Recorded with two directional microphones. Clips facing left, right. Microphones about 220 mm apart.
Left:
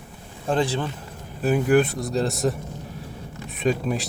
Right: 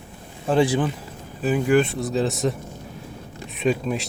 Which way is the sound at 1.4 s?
Centre (ahead or behind).